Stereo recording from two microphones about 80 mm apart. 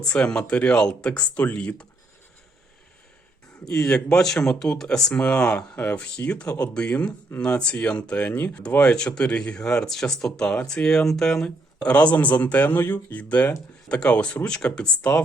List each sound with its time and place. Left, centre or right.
0.0 s speech: centre
3.7 s speech: centre